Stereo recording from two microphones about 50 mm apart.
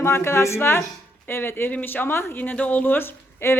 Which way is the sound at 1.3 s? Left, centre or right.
Left.